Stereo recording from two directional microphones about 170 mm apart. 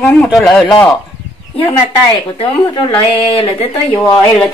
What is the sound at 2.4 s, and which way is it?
Speech, 30° left (ahead or behind).